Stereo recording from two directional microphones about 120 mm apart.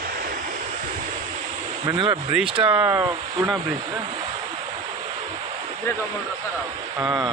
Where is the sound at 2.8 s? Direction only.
25° right (ahead or behind).